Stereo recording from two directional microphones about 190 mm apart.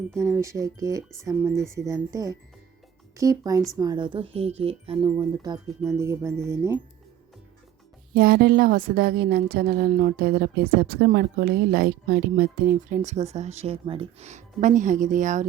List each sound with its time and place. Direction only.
0.2 s speech: 15° right (ahead or behind)
8.1 s a woman's voice: 55° right (ahead or behind)